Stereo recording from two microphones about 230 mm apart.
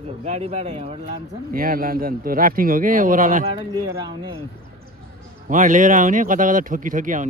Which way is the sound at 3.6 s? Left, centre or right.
Right.